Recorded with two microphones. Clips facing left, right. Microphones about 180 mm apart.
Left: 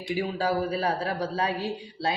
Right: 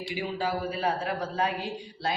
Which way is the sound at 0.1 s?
40° left (ahead or behind).